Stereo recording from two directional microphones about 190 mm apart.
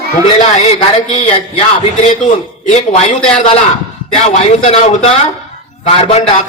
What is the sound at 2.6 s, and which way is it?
Speech, 40° left (ahead or behind).